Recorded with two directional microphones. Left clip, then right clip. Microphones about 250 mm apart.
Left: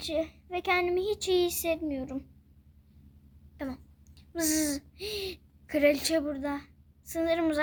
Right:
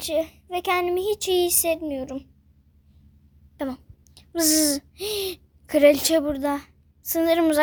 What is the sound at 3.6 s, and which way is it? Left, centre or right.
Speech, right.